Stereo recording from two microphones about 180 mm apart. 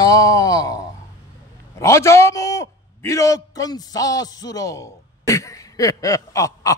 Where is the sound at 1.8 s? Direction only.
15° left (ahead or behind).